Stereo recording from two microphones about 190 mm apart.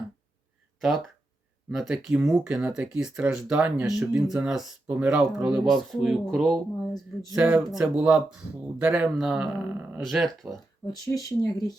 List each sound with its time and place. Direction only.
0.8 s speech: centre (ahead or behind)
10.9 s speech: 20° left (ahead or behind)